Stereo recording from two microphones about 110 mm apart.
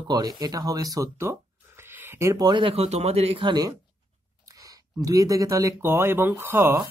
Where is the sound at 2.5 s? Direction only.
50° right (ahead or behind).